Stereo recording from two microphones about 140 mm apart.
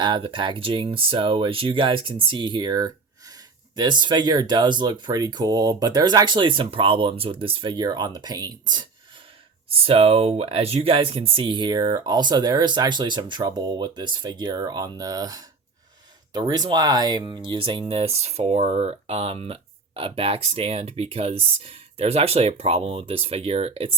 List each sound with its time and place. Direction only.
0.0 s speech: 35° right (ahead or behind)
9.7 s speech: 45° right (ahead or behind)